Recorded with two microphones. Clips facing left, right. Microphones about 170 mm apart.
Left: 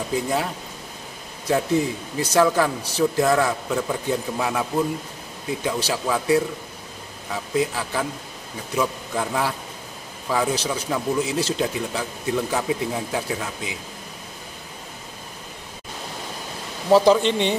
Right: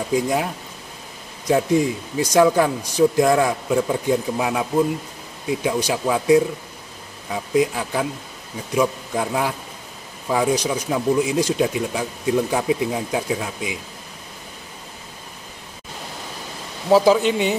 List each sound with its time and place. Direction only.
0.1 s speech: 15° right (ahead or behind)
1.5 s speech: 15° right (ahead or behind)
16.9 s speech: 5° right (ahead or behind)